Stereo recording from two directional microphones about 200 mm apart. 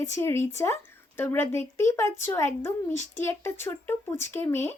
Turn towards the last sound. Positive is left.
turn(degrees=10)  # may be behind; listen again after turning